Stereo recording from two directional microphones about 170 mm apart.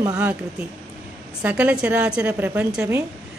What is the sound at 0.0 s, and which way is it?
Speech, 20° right (ahead or behind).